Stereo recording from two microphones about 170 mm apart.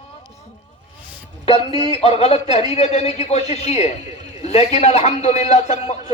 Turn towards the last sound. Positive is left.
turn(degrees=45)  # may be behind; listen again after turning